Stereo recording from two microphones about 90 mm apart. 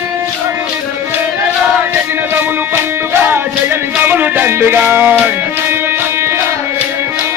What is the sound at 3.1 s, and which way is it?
Music, 25° right (ahead or behind).